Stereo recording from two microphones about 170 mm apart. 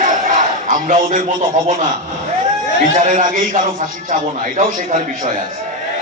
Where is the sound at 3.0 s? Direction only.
50° right (ahead or behind).